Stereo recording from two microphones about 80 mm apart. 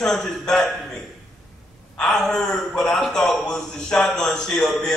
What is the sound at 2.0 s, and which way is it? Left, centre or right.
A man's voice, centre.